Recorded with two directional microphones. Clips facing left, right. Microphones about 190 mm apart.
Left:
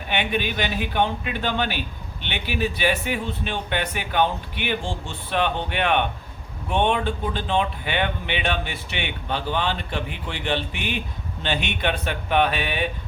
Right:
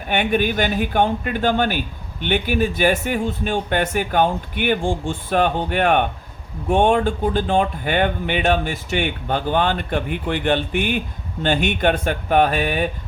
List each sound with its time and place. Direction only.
0.1 s speech: 50° right (ahead or behind)